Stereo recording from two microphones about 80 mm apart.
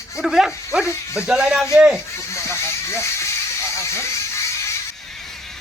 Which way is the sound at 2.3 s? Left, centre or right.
Left.